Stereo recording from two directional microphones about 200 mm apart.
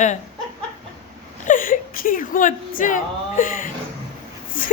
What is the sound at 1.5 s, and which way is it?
Whimper, 45° left (ahead or behind).